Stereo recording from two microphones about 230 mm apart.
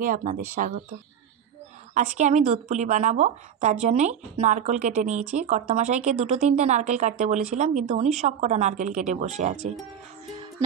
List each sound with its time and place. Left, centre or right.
0.0 s a woman's voice: right
2.0 s a woman's voice: right